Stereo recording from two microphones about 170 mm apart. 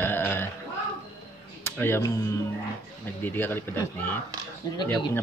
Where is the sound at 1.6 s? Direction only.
15° left (ahead or behind).